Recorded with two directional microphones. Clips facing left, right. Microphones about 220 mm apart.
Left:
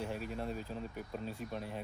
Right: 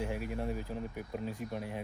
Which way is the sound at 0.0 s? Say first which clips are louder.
Right 3 dB; 15° right (ahead or behind).